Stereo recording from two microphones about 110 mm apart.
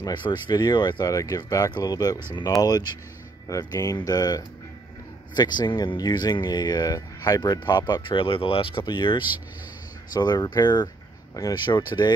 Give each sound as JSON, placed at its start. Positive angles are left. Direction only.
{"t": 0.0, "sound": "speech", "side_deg": 40}